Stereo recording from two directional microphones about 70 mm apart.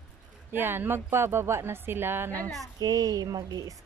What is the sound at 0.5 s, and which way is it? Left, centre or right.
A woman's voice, right.